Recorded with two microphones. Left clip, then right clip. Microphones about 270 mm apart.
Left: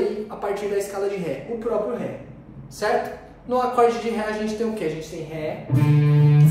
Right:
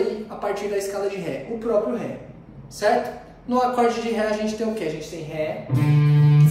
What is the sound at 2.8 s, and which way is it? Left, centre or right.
A woman's voice, centre.